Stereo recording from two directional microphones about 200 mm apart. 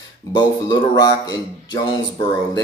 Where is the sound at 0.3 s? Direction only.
20° left (ahead or behind).